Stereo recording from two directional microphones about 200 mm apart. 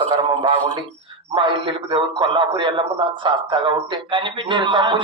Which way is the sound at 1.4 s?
25° right (ahead or behind).